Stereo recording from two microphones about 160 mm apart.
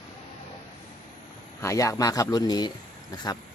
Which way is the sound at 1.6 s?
20° left (ahead or behind).